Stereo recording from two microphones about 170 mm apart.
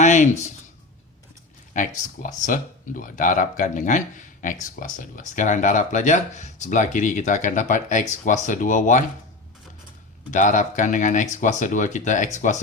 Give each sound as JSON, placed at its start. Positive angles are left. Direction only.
{"t": 0.0, "sound": "speech", "side_deg": 45}
{"t": 2.2, "sound": "speech", "side_deg": 50}
{"t": 10.3, "sound": "speech", "side_deg": 50}